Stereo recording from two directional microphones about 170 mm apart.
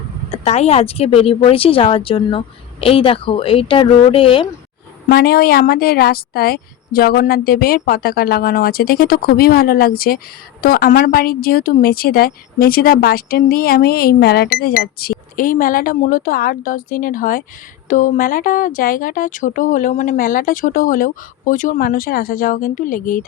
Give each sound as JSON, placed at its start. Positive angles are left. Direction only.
{"t": 0.3, "sound": "speech", "side_deg": 40}
{"t": 5.0, "sound": "a woman's voice", "side_deg": 65}